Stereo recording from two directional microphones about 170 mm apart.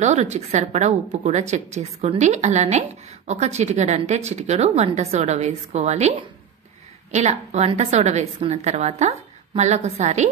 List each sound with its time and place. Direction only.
0.0 s a woman's voice: 40° right (ahead or behind)